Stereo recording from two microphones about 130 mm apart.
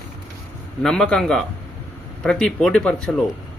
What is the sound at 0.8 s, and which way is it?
Speech, 5° left (ahead or behind).